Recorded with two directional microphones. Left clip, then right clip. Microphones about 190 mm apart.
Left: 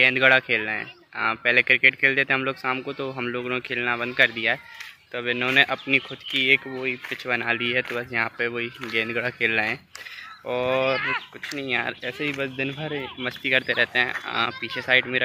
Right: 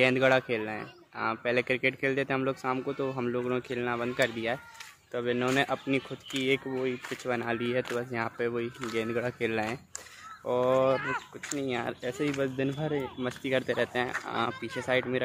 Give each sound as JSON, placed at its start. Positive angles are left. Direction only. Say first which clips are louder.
{"t": 0.0, "sound": "speech", "louder": "left 7 dB", "side_deg": -5}
{"t": 11.0, "sound": "speech", "louder": "left 7 dB", "side_deg": -55}
{"t": 11.5, "sound": "speech", "louder": "left 6 dB", "side_deg": -5}
{"t": 12.9, "sound": "speech", "louder": "left 3 dB", "side_deg": -10}